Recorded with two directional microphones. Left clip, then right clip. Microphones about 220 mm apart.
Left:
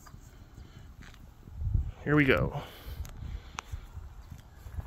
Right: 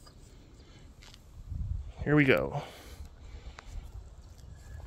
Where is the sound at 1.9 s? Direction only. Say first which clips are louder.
Even; centre (ahead or behind).